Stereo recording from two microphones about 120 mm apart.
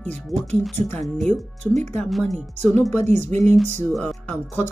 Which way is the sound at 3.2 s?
70° right (ahead or behind).